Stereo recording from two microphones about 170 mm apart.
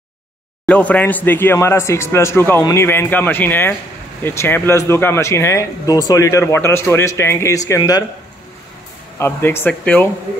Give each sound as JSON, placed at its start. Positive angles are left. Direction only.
{"t": 0.7, "sound": "speech", "side_deg": 10}
{"t": 9.2, "sound": "speech", "side_deg": 15}